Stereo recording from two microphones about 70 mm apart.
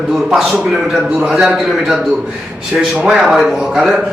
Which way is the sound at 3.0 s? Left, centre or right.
Centre.